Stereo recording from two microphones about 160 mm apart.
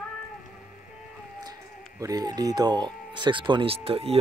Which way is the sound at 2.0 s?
25° right (ahead or behind).